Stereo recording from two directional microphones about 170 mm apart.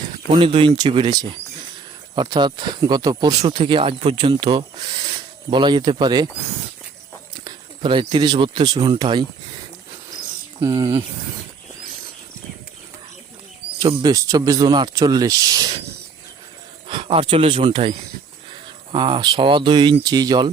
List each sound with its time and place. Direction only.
0.3 s speech: 30° right (ahead or behind)
7.3 s speech: 25° right (ahead or behind)
10.8 s speech: 15° right (ahead or behind)
13.8 s speech: 30° right (ahead or behind)
14.1 s speech: 20° right (ahead or behind)
16.9 s speech: 30° right (ahead or behind)
18.9 s speech: 25° right (ahead or behind)